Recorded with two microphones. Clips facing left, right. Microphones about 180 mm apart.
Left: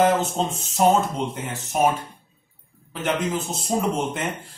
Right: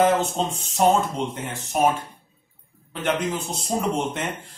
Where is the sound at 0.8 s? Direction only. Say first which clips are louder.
Left 1 dB; 5° left (ahead or behind).